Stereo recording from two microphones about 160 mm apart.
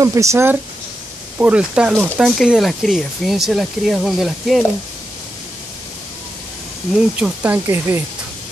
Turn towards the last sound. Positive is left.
turn(degrees=-15)  # may be behind; listen again after turning